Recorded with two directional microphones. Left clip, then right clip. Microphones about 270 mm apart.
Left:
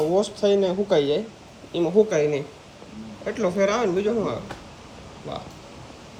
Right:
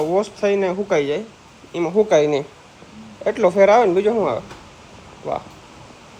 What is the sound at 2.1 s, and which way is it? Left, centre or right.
Speech, right.